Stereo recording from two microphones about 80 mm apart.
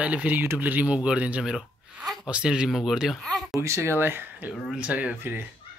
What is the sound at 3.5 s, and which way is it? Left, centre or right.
Speech, right.